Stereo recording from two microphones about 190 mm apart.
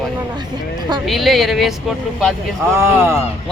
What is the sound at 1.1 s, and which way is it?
Speech, centre (ahead or behind).